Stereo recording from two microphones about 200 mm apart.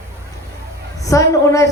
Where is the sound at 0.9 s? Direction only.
15° left (ahead or behind).